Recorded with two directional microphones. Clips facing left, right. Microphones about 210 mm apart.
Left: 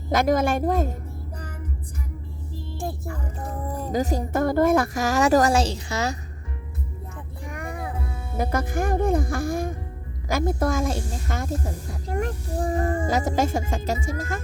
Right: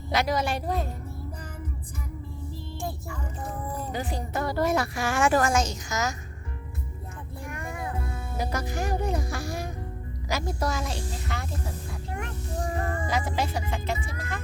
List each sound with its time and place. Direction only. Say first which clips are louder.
0.1 s speech: left 6 dB; 50° left (ahead or behind)
3.9 s a woman's voice: left 10 dB; 40° left (ahead or behind)
7.6 s music: left 3 dB; 15° left (ahead or behind)
8.4 s speech: left 6 dB; 55° left (ahead or behind)